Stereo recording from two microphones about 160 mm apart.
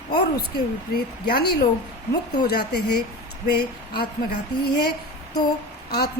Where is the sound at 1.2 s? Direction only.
80° left.